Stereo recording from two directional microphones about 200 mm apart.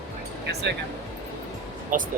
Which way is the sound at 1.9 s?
40° right (ahead or behind).